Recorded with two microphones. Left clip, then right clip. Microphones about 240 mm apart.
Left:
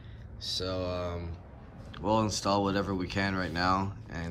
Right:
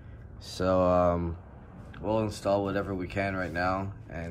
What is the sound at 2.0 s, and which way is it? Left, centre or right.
Speech, centre.